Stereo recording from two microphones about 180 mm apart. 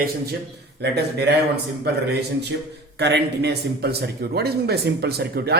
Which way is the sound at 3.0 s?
70° right (ahead or behind).